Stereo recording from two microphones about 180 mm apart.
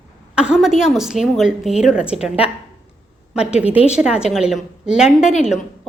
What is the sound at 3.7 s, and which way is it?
Speech, 35° left (ahead or behind).